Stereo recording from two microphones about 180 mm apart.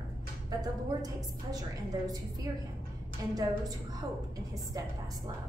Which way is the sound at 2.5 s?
20° right (ahead or behind).